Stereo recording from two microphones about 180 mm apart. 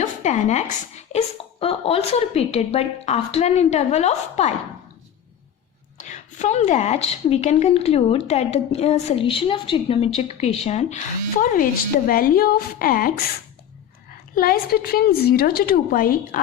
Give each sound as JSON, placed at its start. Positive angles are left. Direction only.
{"t": 0.0, "sound": "a woman's voice", "side_deg": 40}
{"t": 6.0, "sound": "a woman's voice", "side_deg": 40}
{"t": 14.3, "sound": "a woman's voice", "side_deg": 55}